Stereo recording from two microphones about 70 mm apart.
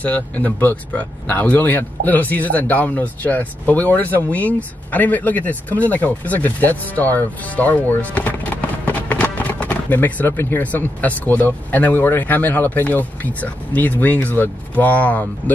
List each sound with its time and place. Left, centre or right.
0.0 s speech: left